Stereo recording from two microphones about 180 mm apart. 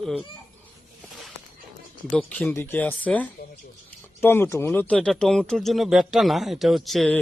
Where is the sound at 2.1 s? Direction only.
5° left (ahead or behind).